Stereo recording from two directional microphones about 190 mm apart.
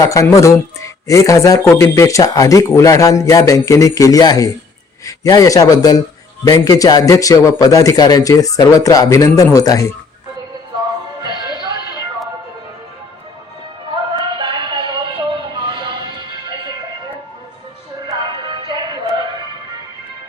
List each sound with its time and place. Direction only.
0.0 s a man's voice: 15° left (ahead or behind)
11.2 s music: 25° right (ahead or behind)
14.3 s a sound: 25° right (ahead or behind)
18.0 s music: 25° right (ahead or behind)